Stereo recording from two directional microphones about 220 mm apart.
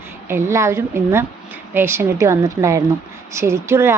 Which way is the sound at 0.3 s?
10° right (ahead or behind).